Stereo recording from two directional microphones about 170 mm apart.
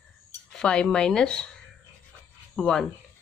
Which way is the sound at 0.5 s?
5° left (ahead or behind).